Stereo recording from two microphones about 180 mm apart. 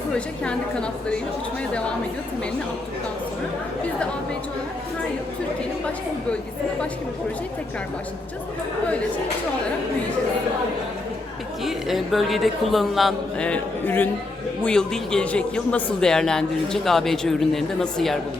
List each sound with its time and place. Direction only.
0.4 s a man's voice: 5° left (ahead or behind)
11.6 s a man's voice: centre (ahead or behind)